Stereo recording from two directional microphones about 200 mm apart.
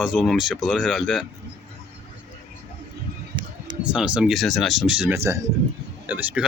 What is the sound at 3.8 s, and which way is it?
Speech, 5° right (ahead or behind).